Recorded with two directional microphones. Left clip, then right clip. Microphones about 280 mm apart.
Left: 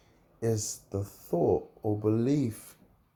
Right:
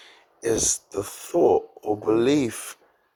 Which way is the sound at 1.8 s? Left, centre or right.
Right.